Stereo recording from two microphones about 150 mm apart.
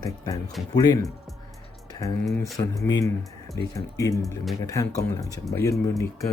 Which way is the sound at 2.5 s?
20° left (ahead or behind).